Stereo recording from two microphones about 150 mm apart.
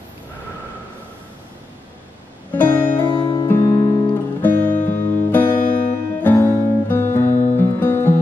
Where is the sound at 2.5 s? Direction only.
10° left (ahead or behind).